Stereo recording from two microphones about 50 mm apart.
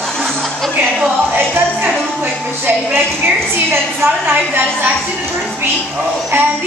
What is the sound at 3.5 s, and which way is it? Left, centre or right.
A woman's voice, right.